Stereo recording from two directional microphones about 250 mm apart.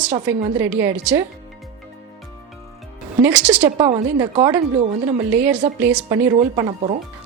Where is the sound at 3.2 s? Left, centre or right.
Centre.